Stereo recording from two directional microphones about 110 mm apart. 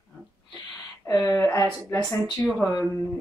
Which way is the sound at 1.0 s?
25° left (ahead or behind).